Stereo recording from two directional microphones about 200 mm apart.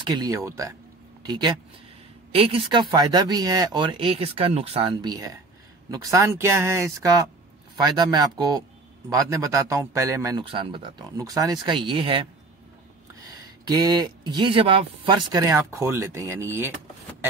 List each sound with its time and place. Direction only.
0.0 s a man's voice: 20° right (ahead or behind)
15.3 s a man's voice: 15° right (ahead or behind)